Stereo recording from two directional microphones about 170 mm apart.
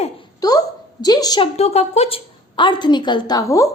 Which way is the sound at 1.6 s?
40° left (ahead or behind).